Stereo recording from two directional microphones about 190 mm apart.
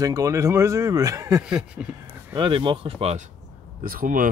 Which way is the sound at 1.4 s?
5° right (ahead or behind).